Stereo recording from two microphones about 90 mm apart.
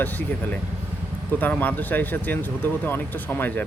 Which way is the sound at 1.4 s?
20° left (ahead or behind).